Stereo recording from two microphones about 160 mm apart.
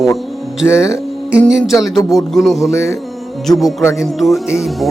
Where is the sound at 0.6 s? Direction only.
5° right (ahead or behind).